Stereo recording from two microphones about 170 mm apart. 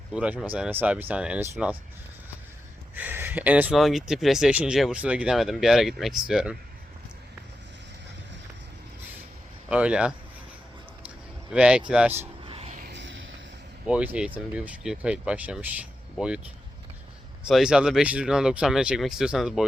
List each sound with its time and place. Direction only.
0.1 s speech: 5° right (ahead or behind)
2.9 s speech: 10° right (ahead or behind)
9.6 s speech: 5° right (ahead or behind)
11.5 s speech: 5° right (ahead or behind)
12.5 s vehicle: 35° right (ahead or behind)
12.8 s a sound: 90° right
13.8 s speech: 10° right (ahead or behind)
17.5 s speech: 5° right (ahead or behind)